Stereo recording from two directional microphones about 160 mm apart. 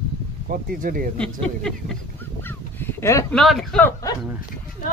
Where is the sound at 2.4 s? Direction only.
15° left (ahead or behind).